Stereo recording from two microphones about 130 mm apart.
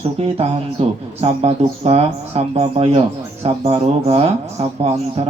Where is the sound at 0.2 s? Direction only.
45° right (ahead or behind).